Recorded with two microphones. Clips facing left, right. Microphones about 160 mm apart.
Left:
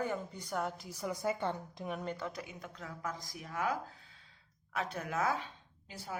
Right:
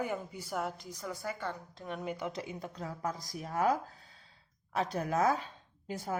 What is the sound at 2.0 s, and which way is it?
Speech, 10° right (ahead or behind).